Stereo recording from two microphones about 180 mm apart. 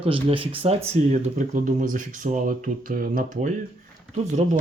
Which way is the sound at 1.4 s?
45° right (ahead or behind).